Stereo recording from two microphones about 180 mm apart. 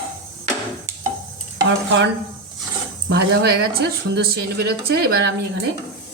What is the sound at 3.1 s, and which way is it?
A woman's voice, 65° right (ahead or behind).